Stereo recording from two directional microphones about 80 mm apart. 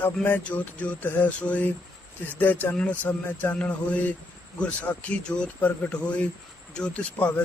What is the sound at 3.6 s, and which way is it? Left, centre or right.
A man's voice, centre.